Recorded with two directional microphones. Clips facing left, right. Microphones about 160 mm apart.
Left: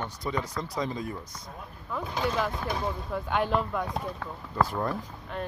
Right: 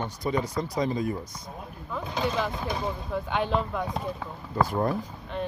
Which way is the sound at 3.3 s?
5° left (ahead or behind).